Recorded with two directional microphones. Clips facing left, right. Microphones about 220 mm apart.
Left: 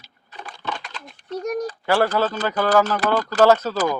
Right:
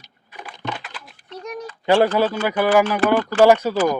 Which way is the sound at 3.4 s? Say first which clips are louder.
Right 2 dB; 15° right (ahead or behind).